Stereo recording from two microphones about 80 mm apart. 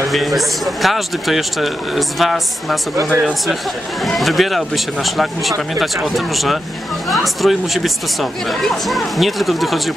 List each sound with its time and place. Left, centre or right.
0.1 s speech: centre
3.1 s speech: centre
4.0 s speech: centre